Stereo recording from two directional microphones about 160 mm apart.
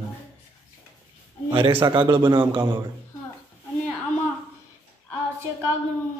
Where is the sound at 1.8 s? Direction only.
30° right (ahead or behind).